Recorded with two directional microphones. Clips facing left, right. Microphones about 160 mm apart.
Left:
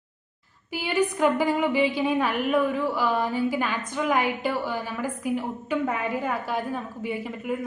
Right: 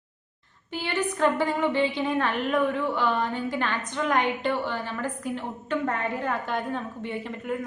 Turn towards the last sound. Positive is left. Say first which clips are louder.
# left 2 dB
turn(degrees=5)  # may be behind; listen again after turning